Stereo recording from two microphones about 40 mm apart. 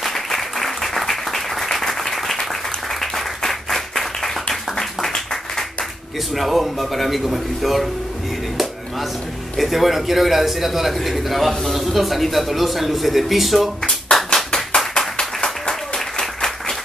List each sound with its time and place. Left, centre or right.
0.0 s applause: centre
5.1 s a sound: centre
6.3 s a man's voice: centre
9.6 s a man's voice: centre
14.3 s clapping: centre
15.0 s a sound: centre
16.2 s applause: centre